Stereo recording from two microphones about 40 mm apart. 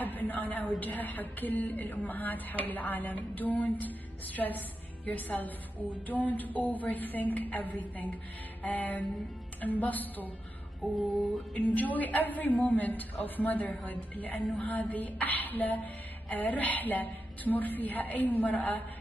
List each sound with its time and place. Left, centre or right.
0.0 s speech: left
11.5 s speech: left